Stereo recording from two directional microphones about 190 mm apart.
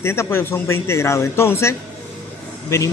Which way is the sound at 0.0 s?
15° left (ahead or behind).